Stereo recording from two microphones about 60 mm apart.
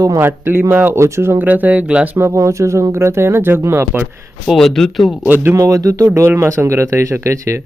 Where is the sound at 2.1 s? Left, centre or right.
Right.